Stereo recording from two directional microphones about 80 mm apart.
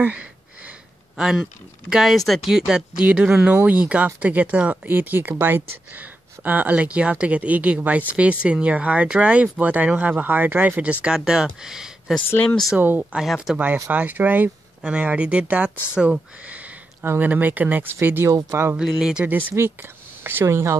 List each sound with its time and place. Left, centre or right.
0.0 s a sound: centre
1.9 s speech: centre
13.8 s speech: right
18.8 s speech: centre
19.5 s speech: right